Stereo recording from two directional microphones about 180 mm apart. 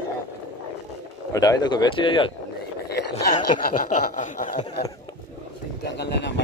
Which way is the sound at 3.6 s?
55° left (ahead or behind).